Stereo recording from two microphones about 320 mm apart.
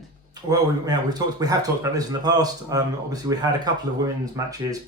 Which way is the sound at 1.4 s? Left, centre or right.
Centre.